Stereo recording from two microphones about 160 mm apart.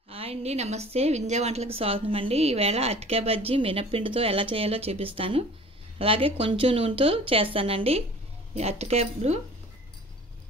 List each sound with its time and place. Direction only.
0.1 s a woman's voice: 40° right (ahead or behind)